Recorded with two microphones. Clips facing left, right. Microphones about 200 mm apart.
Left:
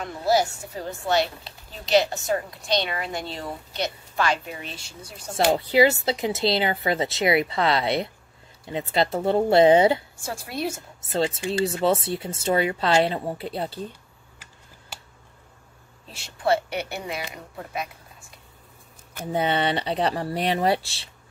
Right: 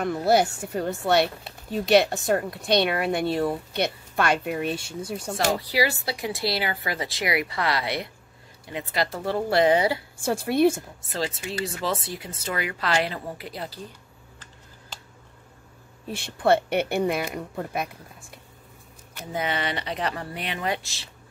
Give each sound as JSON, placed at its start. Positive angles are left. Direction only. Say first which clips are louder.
{"t": 0.0, "sound": "speech", "louder": "right 2 dB", "side_deg": -60}
{"t": 5.5, "sound": "speech", "louder": "left 7 dB", "side_deg": 25}
{"t": 10.2, "sound": "speech", "louder": "right 9 dB", "side_deg": -55}
{"t": 11.0, "sound": "speech", "louder": "left 5 dB", "side_deg": 25}
{"t": 16.1, "sound": "speech", "louder": "right 2 dB", "side_deg": -55}
{"t": 19.3, "sound": "speech", "louder": "left 5 dB", "side_deg": 30}